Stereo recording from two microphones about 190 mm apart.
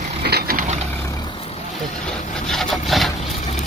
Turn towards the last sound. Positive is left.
turn(degrees=0)  # may be behind; listen again after turning